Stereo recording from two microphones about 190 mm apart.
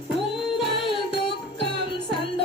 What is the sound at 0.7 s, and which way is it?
Music, 25° left (ahead or behind).